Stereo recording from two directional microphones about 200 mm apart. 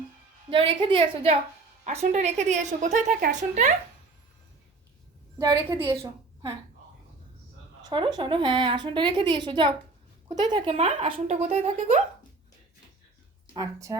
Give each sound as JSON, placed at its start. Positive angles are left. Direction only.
{"t": 0.5, "sound": "a woman's voice", "side_deg": -25}
{"t": 5.4, "sound": "a woman's voice", "side_deg": -15}
{"t": 7.8, "sound": "a woman's voice", "side_deg": -20}
{"t": 10.8, "sound": "a woman's voice", "side_deg": -35}
{"t": 13.5, "sound": "speech", "side_deg": -15}